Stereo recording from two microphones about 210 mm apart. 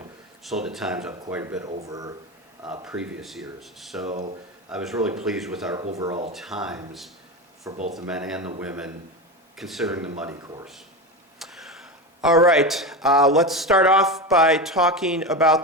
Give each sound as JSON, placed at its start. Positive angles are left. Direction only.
{"t": 0.4, "sound": "speech", "side_deg": 0}
{"t": 2.8, "sound": "speech", "side_deg": -5}
{"t": 7.7, "sound": "speech", "side_deg": -35}
{"t": 8.0, "sound": "speech", "side_deg": -5}
{"t": 10.4, "sound": "speech", "side_deg": -15}
{"t": 11.3, "sound": "speech", "side_deg": 0}